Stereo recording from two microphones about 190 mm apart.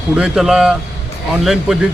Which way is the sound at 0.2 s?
Centre (ahead or behind).